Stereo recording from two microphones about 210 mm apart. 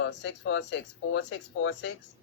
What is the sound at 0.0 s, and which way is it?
Speech, 60° left (ahead or behind).